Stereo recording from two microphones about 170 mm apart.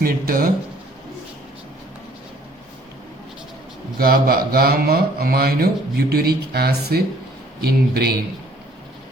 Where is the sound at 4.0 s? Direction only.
60° right (ahead or behind).